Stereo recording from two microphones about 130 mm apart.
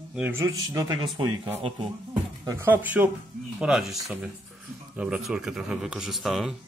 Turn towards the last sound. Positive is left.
turn(degrees=0)  # may be behind; listen again after turning